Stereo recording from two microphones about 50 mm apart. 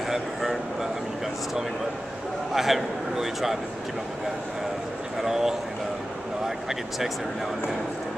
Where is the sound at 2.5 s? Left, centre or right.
Centre.